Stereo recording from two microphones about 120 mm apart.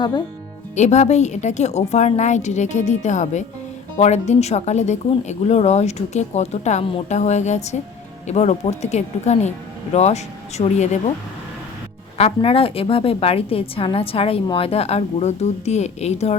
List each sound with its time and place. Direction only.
0.8 s speech: 70° left (ahead or behind)
3.9 s speech: 70° left (ahead or behind)
12.1 s a woman's voice: 55° left (ahead or behind)